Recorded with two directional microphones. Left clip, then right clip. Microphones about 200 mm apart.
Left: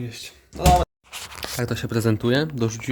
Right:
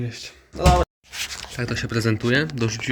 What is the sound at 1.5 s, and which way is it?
Speech, 25° left (ahead or behind).